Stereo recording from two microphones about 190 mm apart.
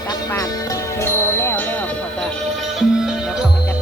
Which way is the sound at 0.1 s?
15° left (ahead or behind).